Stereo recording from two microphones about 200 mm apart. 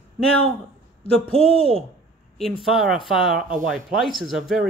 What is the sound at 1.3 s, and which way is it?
Speech, 30° left (ahead or behind).